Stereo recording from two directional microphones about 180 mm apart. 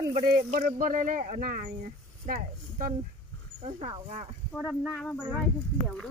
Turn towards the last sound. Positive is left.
turn(degrees=5)  # may be behind; listen again after turning